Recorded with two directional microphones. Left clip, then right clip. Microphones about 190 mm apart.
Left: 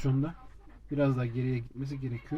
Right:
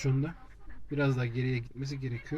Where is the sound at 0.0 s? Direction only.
15° left (ahead or behind).